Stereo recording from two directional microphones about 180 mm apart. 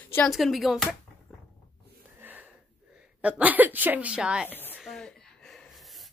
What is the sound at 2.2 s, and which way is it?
Wheeze, 10° right (ahead or behind).